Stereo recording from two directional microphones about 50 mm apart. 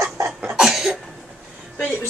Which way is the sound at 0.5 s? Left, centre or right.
Centre.